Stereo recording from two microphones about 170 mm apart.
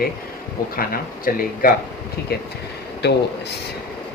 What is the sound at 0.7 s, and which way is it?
Speech, 55° left (ahead or behind).